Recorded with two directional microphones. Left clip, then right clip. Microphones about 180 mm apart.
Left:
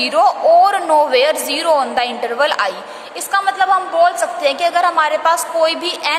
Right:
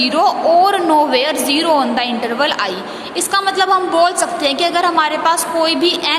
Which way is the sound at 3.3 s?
15° left (ahead or behind).